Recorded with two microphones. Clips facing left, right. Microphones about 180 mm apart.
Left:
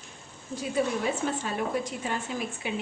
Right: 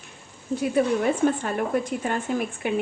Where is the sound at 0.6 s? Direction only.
55° right (ahead or behind).